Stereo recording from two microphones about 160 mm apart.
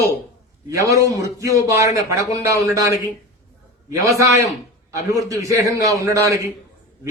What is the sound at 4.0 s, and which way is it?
A man's voice, 20° right (ahead or behind).